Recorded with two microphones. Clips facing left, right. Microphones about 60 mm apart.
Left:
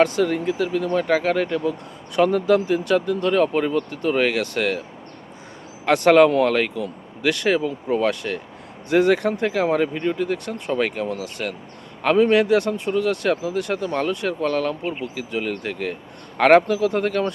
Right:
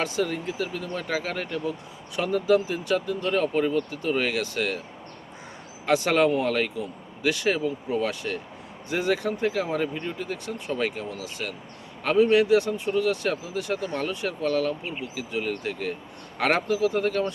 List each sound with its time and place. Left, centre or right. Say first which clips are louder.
0.0 s speech: left 8 dB; left
5.8 s speech: left 7 dB; left